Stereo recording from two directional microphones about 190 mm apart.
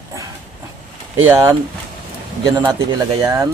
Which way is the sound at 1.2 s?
15° right (ahead or behind).